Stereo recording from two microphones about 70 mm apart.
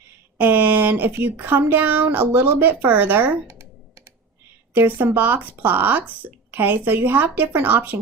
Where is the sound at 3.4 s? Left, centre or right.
Right.